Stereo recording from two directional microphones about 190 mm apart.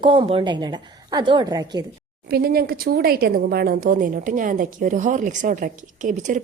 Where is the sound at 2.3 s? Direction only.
55° right (ahead or behind).